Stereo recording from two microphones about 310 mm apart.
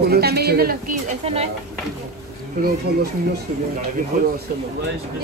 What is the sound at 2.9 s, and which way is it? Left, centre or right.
Speech, right.